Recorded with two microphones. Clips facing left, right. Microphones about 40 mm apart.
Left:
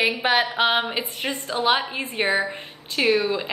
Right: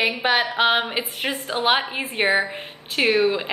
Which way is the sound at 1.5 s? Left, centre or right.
Right.